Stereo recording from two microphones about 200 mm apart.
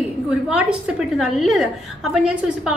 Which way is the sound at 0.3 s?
5° right (ahead or behind).